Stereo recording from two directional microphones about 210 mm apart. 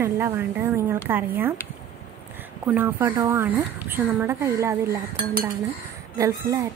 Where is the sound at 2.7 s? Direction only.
10° right (ahead or behind).